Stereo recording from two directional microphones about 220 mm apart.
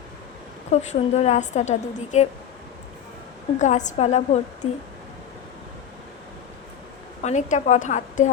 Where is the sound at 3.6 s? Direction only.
35° left (ahead or behind).